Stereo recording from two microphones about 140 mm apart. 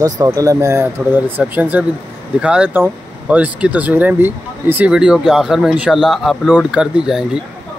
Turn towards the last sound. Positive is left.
turn(degrees=-5)  # may be behind; listen again after turning